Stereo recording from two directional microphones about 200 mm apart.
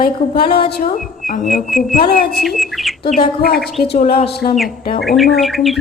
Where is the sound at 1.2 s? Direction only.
40° left (ahead or behind).